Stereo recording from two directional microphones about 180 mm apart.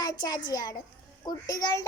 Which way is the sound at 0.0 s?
20° left (ahead or behind).